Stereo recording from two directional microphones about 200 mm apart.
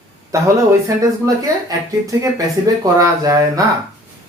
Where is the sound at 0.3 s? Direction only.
15° right (ahead or behind).